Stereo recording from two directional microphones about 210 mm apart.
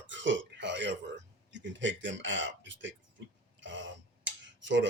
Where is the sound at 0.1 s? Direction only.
60° right (ahead or behind).